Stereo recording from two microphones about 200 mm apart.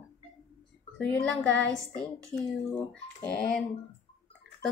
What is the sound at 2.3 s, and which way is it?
Speech, 10° left (ahead or behind).